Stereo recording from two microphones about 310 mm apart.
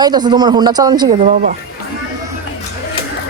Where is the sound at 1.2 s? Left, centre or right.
Right.